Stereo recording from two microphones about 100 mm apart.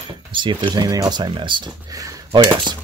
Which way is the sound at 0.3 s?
50° right (ahead or behind).